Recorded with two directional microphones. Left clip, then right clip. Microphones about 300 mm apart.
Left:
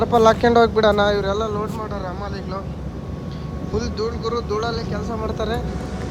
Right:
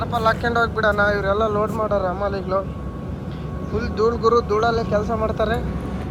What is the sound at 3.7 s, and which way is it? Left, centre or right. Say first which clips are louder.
Speech: right 4 dB; centre.